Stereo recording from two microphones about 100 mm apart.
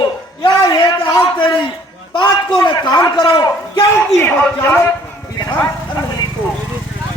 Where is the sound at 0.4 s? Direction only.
55° left (ahead or behind).